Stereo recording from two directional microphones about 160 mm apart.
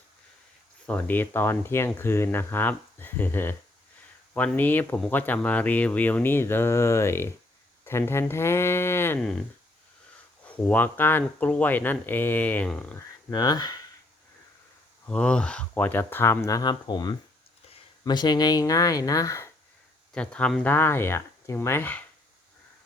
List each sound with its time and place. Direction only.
0.9 s speech: 10° left (ahead or behind)
10.4 s speech: 10° left (ahead or behind)
13.3 s speech: 25° left (ahead or behind)
15.0 s speech: 5° left (ahead or behind)
20.1 s speech: 5° left (ahead or behind)